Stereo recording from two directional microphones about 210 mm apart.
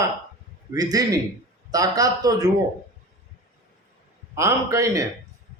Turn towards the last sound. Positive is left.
turn(degrees=-15)  # may be behind; listen again after turning